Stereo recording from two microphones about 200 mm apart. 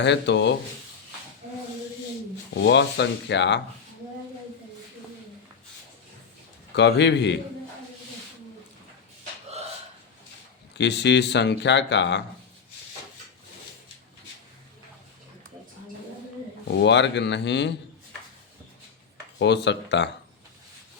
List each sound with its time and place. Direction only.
0.0 s speech: 60° left (ahead or behind)
2.6 s speech: 60° left (ahead or behind)
6.7 s speech: 60° left (ahead or behind)
10.8 s speech: 60° left (ahead or behind)
16.6 s speech: 60° left (ahead or behind)
19.4 s speech: 60° left (ahead or behind)